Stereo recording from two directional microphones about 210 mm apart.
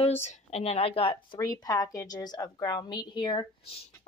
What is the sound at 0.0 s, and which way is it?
Speech, 30° left (ahead or behind).